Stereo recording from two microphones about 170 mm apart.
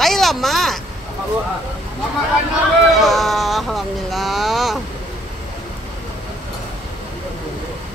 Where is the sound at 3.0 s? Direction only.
Centre (ahead or behind).